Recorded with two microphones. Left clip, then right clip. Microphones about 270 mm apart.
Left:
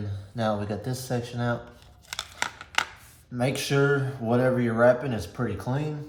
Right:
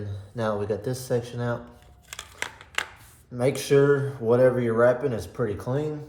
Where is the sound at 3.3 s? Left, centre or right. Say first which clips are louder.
Right 5 dB; centre.